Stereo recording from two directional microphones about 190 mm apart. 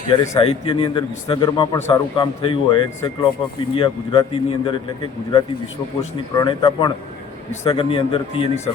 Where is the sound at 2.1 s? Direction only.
25° left (ahead or behind).